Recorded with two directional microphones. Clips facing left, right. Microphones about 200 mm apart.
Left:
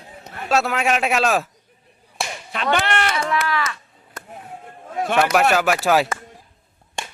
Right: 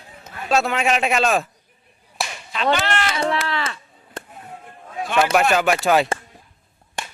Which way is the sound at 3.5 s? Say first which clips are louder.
Left 2 dB; 30° right (ahead or behind).